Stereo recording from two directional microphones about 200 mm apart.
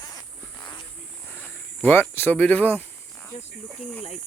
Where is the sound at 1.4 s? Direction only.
10° left (ahead or behind).